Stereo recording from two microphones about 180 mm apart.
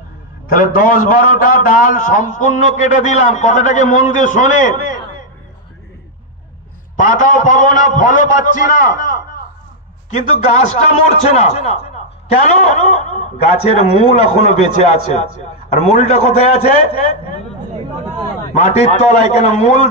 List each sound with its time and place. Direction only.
0.5 s a man's voice: 50° left (ahead or behind)
7.0 s a man's voice: 50° left (ahead or behind)
10.1 s a man's voice: 40° left (ahead or behind)
18.7 s a man's voice: 35° left (ahead or behind)